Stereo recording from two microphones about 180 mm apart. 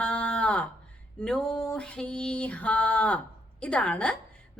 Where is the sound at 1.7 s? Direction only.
5° left (ahead or behind).